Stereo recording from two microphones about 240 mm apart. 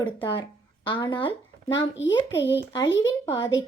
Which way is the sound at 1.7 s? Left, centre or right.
Left.